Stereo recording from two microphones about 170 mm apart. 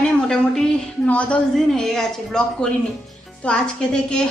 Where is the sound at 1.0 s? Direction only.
5° left (ahead or behind).